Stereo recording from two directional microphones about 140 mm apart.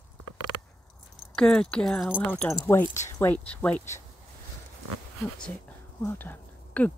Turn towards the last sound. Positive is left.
turn(degrees=10)  # may be behind; listen again after turning